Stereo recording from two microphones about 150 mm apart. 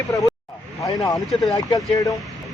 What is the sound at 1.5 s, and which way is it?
Speech, 25° left (ahead or behind).